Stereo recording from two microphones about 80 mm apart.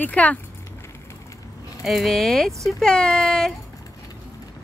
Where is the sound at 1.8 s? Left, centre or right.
Centre.